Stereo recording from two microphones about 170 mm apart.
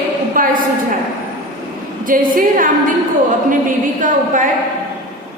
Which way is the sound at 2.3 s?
55° right (ahead or behind).